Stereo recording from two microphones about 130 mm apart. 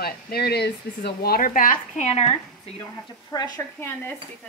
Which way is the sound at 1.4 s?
90° left.